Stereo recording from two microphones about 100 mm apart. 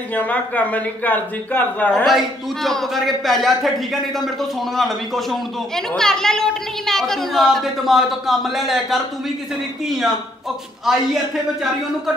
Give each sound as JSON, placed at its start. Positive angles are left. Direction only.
{"t": 0.1, "sound": "speech", "side_deg": 15}
{"t": 2.0, "sound": "a man's voice", "side_deg": 0}